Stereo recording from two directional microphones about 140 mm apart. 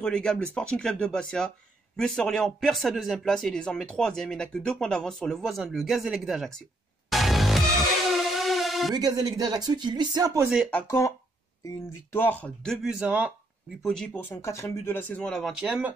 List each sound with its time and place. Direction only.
0.0 s speech: 5° left (ahead or behind)
7.1 s music: centre (ahead or behind)
8.9 s speech: 30° right (ahead or behind)
10.7 s speech: 10° left (ahead or behind); by 13.3 s 10° right (ahead or behind)
13.8 s speech: 5° left (ahead or behind)